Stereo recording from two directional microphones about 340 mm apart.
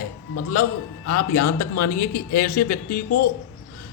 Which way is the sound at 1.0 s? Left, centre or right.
Left.